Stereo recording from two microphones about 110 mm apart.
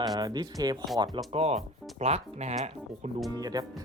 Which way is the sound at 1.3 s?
65° right (ahead or behind).